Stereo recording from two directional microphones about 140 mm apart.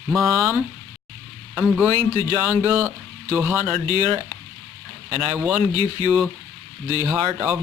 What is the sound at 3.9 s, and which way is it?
Speech, 30° left (ahead or behind).